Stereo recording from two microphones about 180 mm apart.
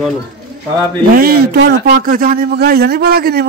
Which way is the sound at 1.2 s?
60° right (ahead or behind).